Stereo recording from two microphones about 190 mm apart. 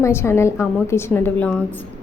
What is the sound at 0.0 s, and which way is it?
A woman's voice, 15° left (ahead or behind).